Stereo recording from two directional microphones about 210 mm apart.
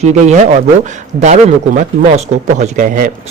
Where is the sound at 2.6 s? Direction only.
40° right (ahead or behind).